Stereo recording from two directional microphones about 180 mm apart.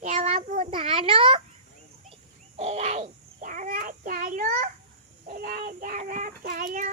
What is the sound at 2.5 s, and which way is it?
Babbling, 35° right (ahead or behind).